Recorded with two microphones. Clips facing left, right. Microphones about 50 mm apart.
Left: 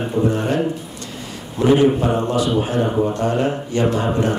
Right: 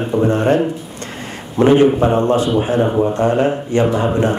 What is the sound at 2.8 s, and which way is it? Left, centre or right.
Speech, centre.